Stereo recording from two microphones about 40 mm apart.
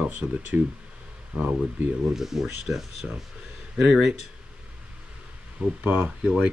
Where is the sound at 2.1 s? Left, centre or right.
Centre.